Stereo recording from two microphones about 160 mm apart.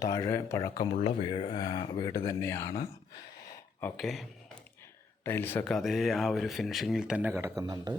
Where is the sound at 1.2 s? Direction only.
35° left (ahead or behind).